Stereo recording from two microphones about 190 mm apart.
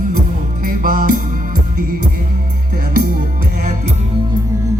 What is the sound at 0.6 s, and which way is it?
Music, 45° right (ahead or behind).